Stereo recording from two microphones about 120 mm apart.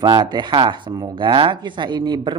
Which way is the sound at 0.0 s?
40° right (ahead or behind).